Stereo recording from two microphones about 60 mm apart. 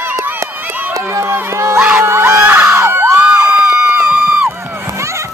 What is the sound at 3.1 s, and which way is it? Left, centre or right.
Crowd, right.